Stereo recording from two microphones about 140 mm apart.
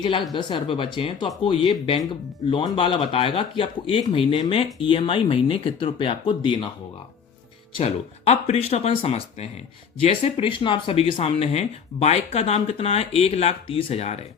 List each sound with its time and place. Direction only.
0.0 s speech: 35° left (ahead or behind)
2.7 s speech: 40° left (ahead or behind)
7.8 s speech: 50° left (ahead or behind)